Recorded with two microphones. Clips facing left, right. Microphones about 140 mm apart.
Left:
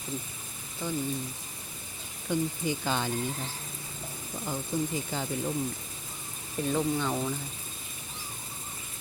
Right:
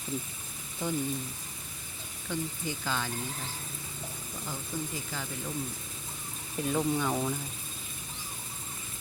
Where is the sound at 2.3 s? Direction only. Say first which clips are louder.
Left 6 dB; 20° left (ahead or behind).